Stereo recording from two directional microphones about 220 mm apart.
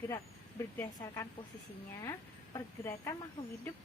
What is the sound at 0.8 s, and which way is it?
Speech, 15° left (ahead or behind).